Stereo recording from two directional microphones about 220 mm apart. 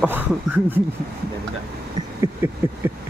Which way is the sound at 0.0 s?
10° right (ahead or behind).